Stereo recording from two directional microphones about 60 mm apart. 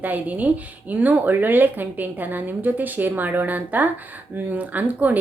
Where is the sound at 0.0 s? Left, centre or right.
Right.